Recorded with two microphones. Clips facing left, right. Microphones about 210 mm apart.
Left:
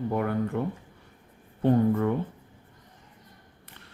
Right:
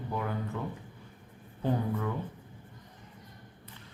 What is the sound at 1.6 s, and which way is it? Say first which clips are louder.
Speech: left 9 dB; 50° left (ahead or behind).